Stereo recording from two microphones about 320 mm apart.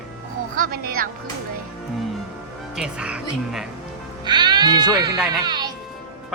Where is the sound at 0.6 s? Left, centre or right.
Right.